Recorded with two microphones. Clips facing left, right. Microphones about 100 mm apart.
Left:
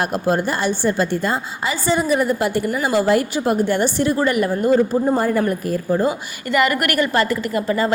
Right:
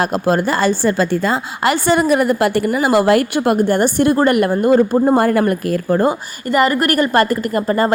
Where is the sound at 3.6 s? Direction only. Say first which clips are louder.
Right 4 dB; 50° right (ahead or behind); by 6.1 s 70° right (ahead or behind).